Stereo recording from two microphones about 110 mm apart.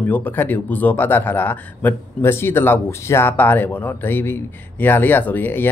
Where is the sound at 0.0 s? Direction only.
15° left (ahead or behind).